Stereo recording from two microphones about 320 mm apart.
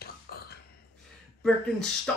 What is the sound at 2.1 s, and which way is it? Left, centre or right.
Beatboxing, centre.